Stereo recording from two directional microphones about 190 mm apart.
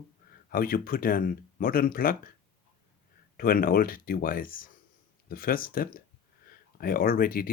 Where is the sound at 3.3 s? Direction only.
50° left (ahead or behind).